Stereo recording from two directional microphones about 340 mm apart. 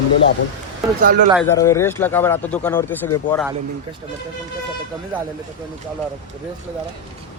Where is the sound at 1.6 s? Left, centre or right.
Centre.